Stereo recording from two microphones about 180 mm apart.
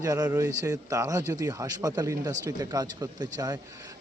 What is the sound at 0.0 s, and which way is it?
A man's voice, 20° right (ahead or behind).